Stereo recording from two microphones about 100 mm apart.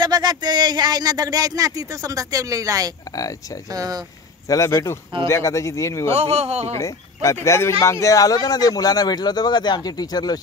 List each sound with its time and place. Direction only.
0.0 s speech: 45° right (ahead or behind)
4.5 s speech: 30° left (ahead or behind)
6.1 s speech: 90° right
6.8 s speech: 30° left (ahead or behind)